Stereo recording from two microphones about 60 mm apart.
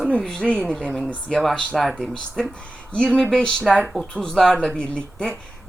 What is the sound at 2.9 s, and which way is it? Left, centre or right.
Speech, centre.